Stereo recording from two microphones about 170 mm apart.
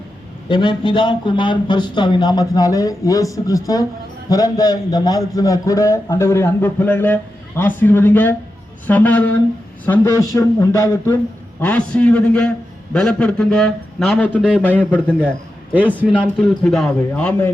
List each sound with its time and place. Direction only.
0.4 s a man's voice: 30° left (ahead or behind); by 17.5 s 5° left (ahead or behind)